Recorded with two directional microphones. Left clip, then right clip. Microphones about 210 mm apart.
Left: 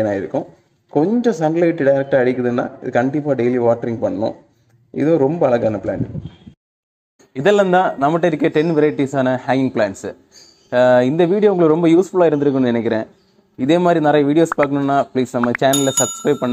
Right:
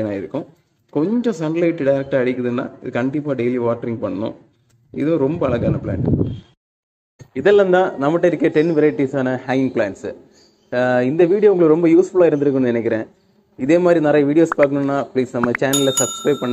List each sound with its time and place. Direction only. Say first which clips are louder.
0.0 s a man's voice: left 5 dB; centre (ahead or behind)
7.3 s a man's voice: even; 50° left (ahead or behind)
15.9 s a man's voice: left 1 dB; centre (ahead or behind)